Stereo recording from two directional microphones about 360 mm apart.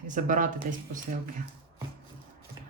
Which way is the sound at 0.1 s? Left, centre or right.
Right.